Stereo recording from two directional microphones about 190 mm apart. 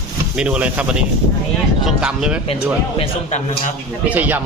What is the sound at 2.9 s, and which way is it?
Speech, 35° left (ahead or behind).